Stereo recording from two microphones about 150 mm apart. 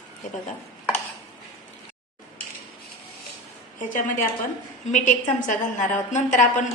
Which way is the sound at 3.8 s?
60° left (ahead or behind).